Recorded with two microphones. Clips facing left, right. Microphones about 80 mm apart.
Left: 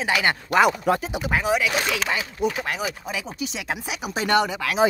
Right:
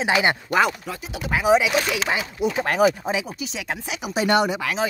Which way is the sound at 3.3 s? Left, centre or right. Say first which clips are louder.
Left 1 dB; centre.